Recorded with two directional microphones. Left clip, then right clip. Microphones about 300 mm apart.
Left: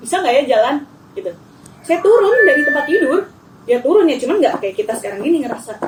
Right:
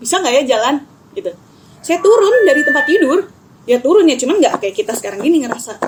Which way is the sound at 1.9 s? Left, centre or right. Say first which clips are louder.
Right 2 dB; right.